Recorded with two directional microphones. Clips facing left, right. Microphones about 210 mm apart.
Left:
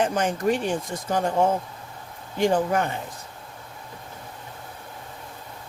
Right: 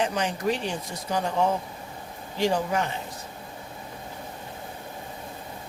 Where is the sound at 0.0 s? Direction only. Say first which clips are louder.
Left 3 dB; 50° left (ahead or behind).